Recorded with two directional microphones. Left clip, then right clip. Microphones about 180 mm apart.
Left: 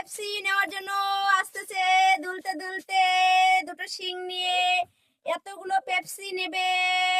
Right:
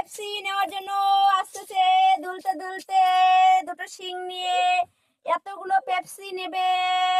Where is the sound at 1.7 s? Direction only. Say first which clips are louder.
Right 3 dB; centre (ahead or behind).